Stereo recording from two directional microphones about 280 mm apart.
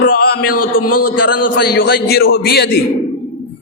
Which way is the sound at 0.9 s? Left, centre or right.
Left.